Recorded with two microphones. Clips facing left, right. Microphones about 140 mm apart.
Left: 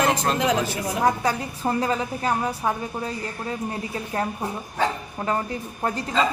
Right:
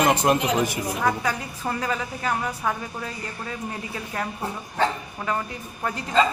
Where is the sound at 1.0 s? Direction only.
30° left (ahead or behind).